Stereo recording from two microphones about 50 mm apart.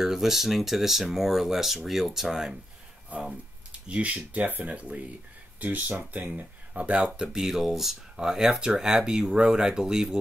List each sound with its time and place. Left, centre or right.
0.0 s speech: centre
3.1 s speech: right
4.7 s speech: right
7.2 s speech: centre